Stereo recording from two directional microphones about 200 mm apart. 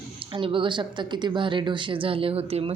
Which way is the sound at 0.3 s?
25° right (ahead or behind).